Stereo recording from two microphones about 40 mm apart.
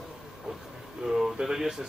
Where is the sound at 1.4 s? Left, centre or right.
Centre.